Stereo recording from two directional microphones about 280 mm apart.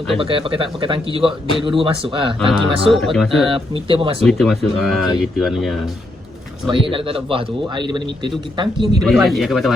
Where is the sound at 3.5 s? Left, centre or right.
Centre.